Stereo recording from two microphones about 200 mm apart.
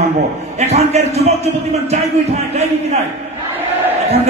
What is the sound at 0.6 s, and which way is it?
A man's voice, 30° right (ahead or behind).